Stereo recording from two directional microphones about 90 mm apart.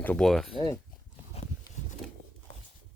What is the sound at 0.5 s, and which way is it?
Speech, 60° left (ahead or behind).